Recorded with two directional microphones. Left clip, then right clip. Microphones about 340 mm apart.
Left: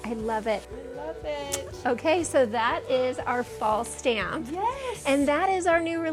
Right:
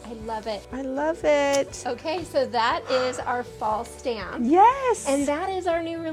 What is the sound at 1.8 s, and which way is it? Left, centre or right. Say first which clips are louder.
Speech: left 4 dB; left.